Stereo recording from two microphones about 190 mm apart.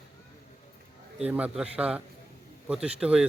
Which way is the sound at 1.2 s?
5° right (ahead or behind).